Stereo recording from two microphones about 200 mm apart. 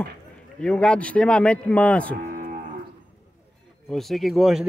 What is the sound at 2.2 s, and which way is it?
Cattle, 40° right (ahead or behind).